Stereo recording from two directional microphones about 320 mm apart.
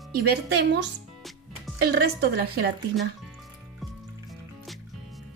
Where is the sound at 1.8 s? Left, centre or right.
Right.